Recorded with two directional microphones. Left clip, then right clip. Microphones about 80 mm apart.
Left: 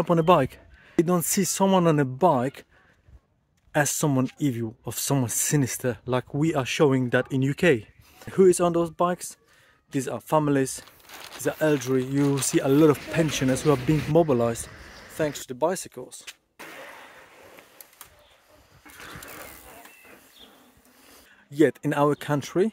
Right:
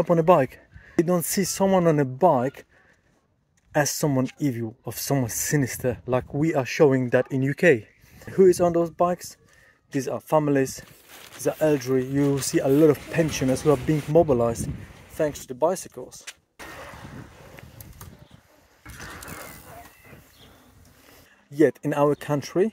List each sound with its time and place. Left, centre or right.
0.0 s speech: left
2.0 s speech: left
3.7 s speech: left
13.1 s speech: left
16.7 s vehicle: right
19.0 s vehicle: right
19.6 s a sound: centre
21.5 s speech: left